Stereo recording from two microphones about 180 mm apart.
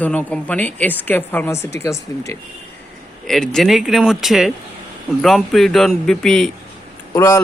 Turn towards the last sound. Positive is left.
turn(degrees=15)  # may be behind; listen again after turning